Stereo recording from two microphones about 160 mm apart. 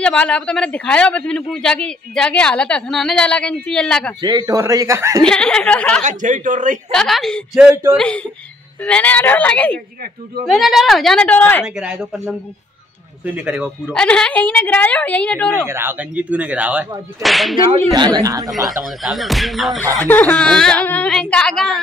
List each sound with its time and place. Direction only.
0.0 s speech: 5° left (ahead or behind)
4.2 s speech: 25° right (ahead or behind)
5.2 s speech: 5° left (ahead or behind)
6.0 s a man's voice: 50° right (ahead or behind)
6.9 s a woman's voice: centre (ahead or behind)
11.6 s speech: 5° right (ahead or behind)
13.9 s a woman's voice: 5° left (ahead or behind)
15.6 s speech: 15° right (ahead or behind)
17.9 s speech: 25° right (ahead or behind)
18.5 s speech: centre (ahead or behind)
19.8 s speech: 20° right (ahead or behind)
20.1 s speech: 5° left (ahead or behind)